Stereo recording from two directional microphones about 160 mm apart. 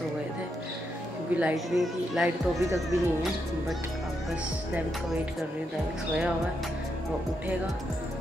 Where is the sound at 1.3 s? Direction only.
5° right (ahead or behind).